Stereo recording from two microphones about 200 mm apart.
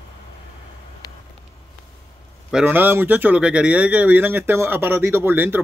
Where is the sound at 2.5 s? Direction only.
10° right (ahead or behind).